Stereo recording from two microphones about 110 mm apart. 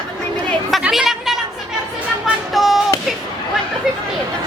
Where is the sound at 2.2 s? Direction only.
Centre (ahead or behind).